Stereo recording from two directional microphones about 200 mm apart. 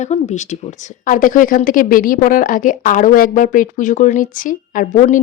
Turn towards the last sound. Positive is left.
turn(degrees=40)  # may be behind; listen again after turning